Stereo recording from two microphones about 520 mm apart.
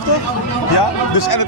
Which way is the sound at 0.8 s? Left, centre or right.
Left.